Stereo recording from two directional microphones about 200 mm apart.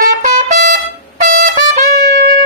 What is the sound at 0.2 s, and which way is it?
Trumpet, 45° right (ahead or behind).